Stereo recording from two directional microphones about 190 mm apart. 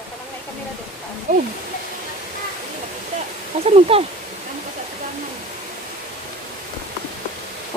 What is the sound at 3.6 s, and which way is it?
Speech, 30° right (ahead or behind).